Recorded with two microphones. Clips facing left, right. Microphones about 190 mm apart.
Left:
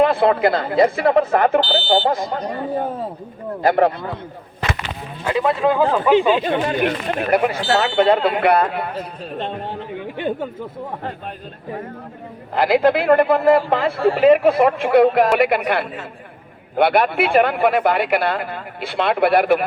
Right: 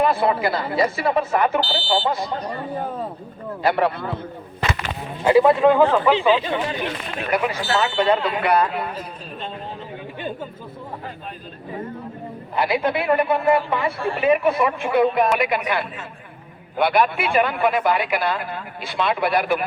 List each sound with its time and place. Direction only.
0.0 s speech: 60° left (ahead or behind)
3.6 s speech: 45° left (ahead or behind)
5.3 s speech: 5° right (ahead or behind)
5.6 s speech: 10° left (ahead or behind)
6.1 s speech: 50° left (ahead or behind)
12.7 s speech: 65° left (ahead or behind)
15.3 s speech: 60° left (ahead or behind)